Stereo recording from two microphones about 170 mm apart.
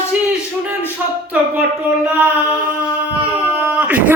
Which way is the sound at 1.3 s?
10° right (ahead or behind).